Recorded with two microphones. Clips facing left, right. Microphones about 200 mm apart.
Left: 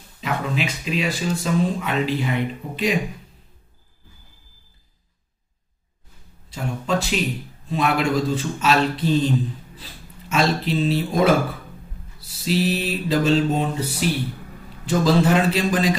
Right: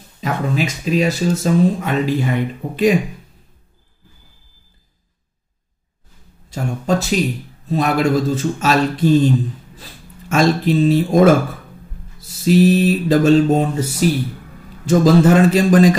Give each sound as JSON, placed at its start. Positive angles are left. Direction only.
{"t": 0.2, "sound": "speech", "side_deg": -45}
{"t": 6.5, "sound": "speech", "side_deg": -40}